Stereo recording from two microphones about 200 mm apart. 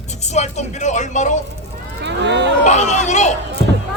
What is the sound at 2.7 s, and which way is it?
Speech, 35° left (ahead or behind).